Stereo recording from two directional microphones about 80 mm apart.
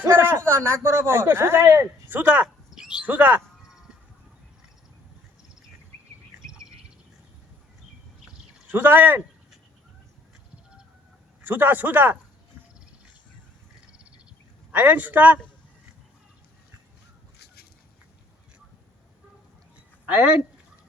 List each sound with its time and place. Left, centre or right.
0.0 s speech: right
2.7 s bird: centre
3.1 s a man's voice: right
8.7 s a man's voice: right
11.4 s a man's voice: right
14.7 s a man's voice: right